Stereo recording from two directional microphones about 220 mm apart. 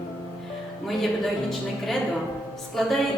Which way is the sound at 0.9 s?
Centre (ahead or behind).